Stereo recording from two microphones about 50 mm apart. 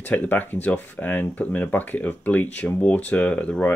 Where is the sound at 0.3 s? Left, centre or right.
Left.